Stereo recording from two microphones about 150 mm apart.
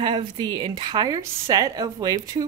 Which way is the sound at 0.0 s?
30° right (ahead or behind).